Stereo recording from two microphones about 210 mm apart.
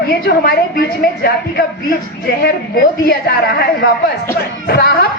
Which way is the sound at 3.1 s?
45° left (ahead or behind).